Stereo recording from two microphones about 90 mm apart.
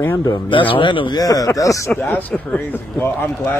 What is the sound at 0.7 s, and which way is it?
Speech, 65° left (ahead or behind).